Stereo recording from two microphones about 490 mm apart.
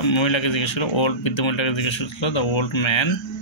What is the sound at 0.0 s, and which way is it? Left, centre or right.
Speech, left.